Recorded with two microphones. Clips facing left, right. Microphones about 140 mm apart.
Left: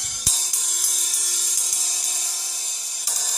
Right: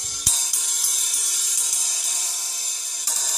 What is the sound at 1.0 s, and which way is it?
Music, 40° left (ahead or behind).